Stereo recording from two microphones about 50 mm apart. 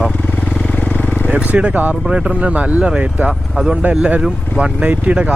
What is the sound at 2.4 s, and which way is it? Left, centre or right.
Speech, right.